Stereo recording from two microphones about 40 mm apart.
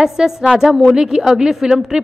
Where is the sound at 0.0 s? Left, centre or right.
Centre.